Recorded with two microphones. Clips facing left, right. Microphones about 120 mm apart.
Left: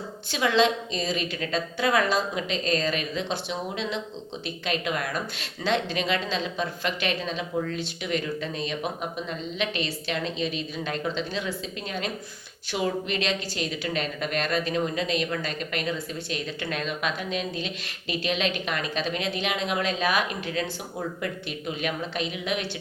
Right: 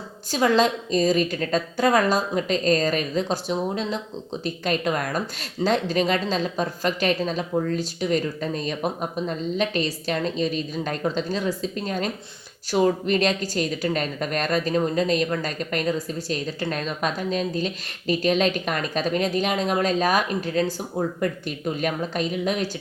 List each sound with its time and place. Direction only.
0.3 s a woman's voice: 40° right (ahead or behind)